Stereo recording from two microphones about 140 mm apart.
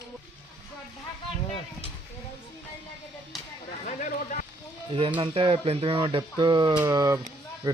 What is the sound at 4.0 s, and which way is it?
Run, 70° left (ahead or behind).